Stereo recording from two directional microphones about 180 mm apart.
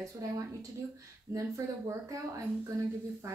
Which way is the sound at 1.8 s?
20° right (ahead or behind).